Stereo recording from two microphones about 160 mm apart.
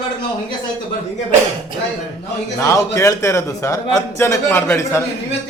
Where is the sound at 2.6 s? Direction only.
20° left (ahead or behind).